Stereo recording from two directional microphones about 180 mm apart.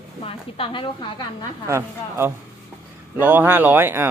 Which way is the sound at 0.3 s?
30° left (ahead or behind).